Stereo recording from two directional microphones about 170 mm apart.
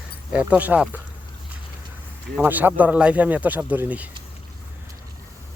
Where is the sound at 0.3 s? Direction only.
10° right (ahead or behind).